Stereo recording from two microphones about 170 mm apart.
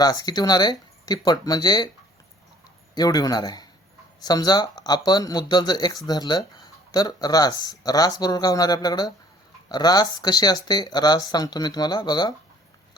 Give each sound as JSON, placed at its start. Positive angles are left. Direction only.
{"t": 0.0, "sound": "speech", "side_deg": 25}
{"t": 2.9, "sound": "speech", "side_deg": 25}